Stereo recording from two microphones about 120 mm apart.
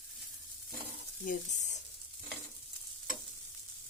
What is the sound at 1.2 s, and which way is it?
Speech, 90° left.